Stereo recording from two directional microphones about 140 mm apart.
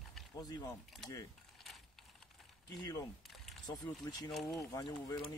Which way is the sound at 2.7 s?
30° left (ahead or behind).